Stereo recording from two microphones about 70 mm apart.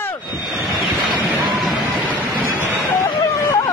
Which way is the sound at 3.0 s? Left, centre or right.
Left.